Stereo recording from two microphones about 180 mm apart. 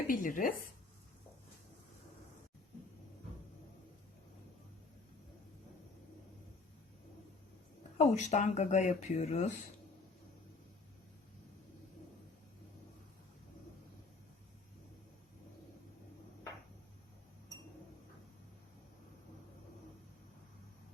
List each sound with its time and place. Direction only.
0.1 s speech: 50° left (ahead or behind)
7.9 s speech: 40° left (ahead or behind)